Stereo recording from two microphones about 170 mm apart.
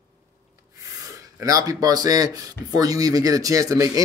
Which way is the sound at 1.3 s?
20° right (ahead or behind).